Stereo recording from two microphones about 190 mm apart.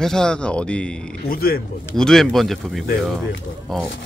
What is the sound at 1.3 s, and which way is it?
Speech, 50° left (ahead or behind).